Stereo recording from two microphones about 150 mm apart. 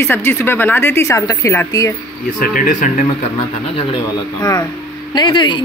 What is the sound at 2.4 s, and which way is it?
Speech, 65° left (ahead or behind).